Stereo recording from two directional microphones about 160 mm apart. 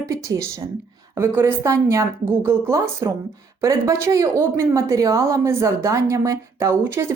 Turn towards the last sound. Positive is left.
turn(degrees=-15)  # may be behind; listen again after turning